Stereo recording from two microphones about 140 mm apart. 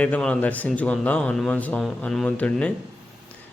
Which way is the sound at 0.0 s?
10° left (ahead or behind).